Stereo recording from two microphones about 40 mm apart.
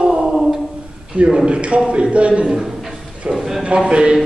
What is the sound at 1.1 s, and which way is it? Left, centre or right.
A man's voice, right.